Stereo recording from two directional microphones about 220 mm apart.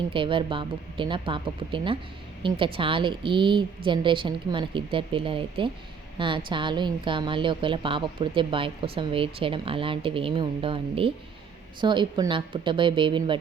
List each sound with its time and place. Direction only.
0.1 s a woman's voice: 25° right (ahead or behind)